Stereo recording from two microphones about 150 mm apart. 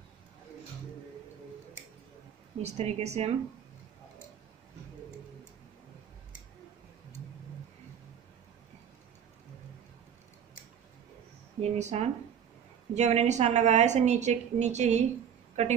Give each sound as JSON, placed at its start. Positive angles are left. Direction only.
{"t": 2.6, "sound": "a woman's voice", "side_deg": -45}
{"t": 11.6, "sound": "a woman's voice", "side_deg": -50}